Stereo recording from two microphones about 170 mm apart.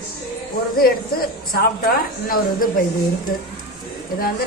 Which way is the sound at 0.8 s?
60° left (ahead or behind).